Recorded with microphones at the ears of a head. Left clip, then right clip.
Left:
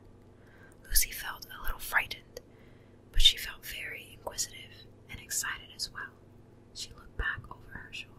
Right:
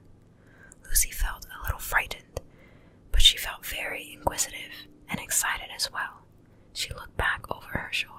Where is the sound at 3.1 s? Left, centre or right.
Right.